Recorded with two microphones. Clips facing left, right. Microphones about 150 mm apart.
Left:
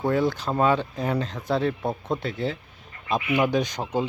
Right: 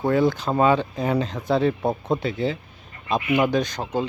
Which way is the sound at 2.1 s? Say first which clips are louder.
Right 4 dB; centre (ahead or behind).